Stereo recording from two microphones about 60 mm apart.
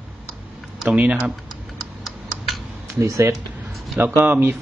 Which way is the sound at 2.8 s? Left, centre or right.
Right.